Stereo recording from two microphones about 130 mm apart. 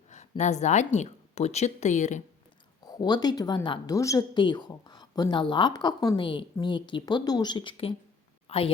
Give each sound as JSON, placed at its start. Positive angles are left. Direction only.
{"t": 0.1, "sound": "a woman's voice", "side_deg": 65}
{"t": 2.8, "sound": "a woman's voice", "side_deg": 30}